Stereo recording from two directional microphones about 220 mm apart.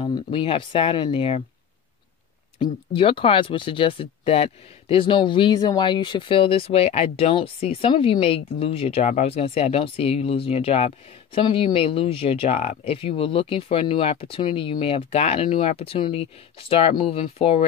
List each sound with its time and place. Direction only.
0.0 s speech: 20° left (ahead or behind)
2.6 s speech: 25° left (ahead or behind)